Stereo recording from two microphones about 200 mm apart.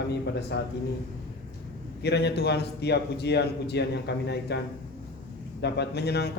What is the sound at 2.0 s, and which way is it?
A man's voice, 55° left (ahead or behind).